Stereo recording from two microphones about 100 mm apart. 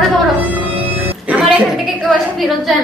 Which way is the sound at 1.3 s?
10° right (ahead or behind).